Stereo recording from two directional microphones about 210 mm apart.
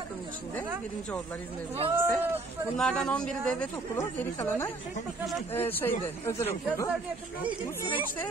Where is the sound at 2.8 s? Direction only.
5° left (ahead or behind).